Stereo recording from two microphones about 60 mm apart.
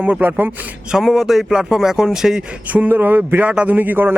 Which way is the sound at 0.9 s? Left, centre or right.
Centre.